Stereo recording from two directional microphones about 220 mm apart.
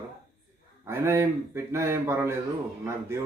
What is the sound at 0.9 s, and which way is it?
Speech, 10° right (ahead or behind).